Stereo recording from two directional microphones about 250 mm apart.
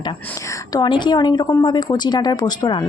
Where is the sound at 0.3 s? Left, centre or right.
Centre.